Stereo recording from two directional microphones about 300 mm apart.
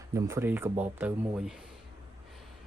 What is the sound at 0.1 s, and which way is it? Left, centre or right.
Speech, centre.